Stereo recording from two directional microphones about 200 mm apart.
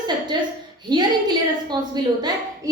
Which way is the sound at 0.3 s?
20° right (ahead or behind).